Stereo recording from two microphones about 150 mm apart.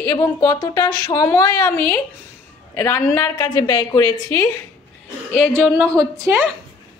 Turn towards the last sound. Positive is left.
turn(degrees=-15)  # may be behind; listen again after turning